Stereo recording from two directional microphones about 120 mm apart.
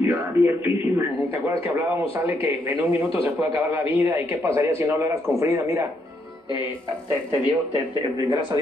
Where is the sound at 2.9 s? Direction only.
50° left (ahead or behind).